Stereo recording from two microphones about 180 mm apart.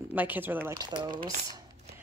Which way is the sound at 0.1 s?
10° right (ahead or behind).